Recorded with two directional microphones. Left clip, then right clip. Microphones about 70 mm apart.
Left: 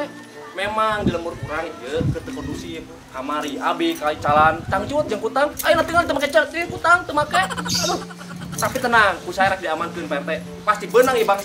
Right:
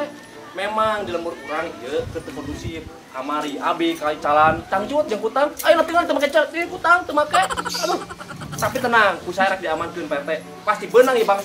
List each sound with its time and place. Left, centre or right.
0.6 s speech: centre
3.2 s speech: centre
7.6 s speech: left
8.5 s speech: centre